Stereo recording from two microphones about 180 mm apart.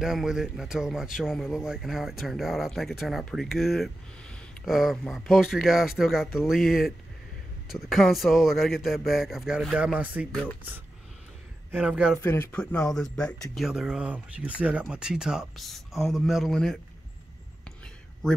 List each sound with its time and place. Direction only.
0.0 s speech: 5° right (ahead or behind)
10.3 s speech: 5° left (ahead or behind)
11.7 s speech: 5° right (ahead or behind)
12.2 s speech: 10° left (ahead or behind)